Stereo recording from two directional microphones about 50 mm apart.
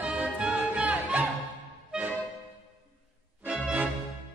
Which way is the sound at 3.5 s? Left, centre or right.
Right.